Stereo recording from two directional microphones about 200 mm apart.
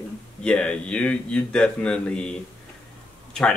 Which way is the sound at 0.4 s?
5° left (ahead or behind).